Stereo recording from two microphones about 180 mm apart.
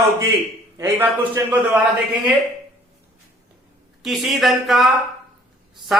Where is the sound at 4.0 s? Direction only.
Centre (ahead or behind).